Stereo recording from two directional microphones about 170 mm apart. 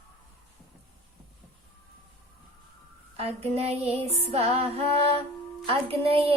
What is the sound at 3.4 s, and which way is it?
Music, 35° right (ahead or behind).